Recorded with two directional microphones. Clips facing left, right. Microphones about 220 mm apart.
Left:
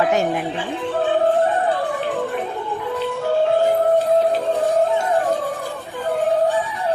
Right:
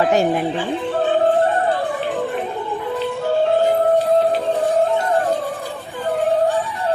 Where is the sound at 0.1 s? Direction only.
35° right (ahead or behind).